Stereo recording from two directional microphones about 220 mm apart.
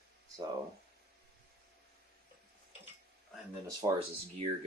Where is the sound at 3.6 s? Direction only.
20° right (ahead or behind).